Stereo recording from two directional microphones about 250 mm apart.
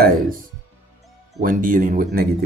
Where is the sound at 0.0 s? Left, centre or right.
Right.